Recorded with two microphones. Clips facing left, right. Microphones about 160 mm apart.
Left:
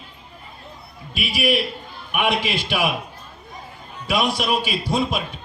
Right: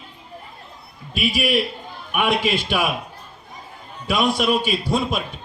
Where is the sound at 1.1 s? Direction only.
45° right (ahead or behind).